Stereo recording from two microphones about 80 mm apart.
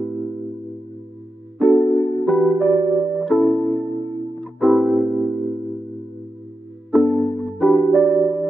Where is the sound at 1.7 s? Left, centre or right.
Left.